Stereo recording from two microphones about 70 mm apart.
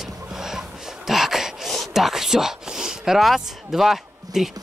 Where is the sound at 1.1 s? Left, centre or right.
Centre.